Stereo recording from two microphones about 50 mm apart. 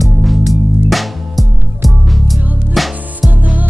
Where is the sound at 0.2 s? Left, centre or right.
Centre.